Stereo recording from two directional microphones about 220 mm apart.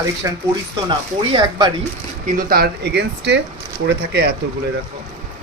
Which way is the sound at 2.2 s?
40° right (ahead or behind).